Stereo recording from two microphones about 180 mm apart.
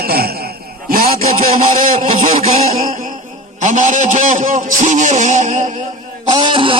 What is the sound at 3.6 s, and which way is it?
A man's voice, 45° right (ahead or behind).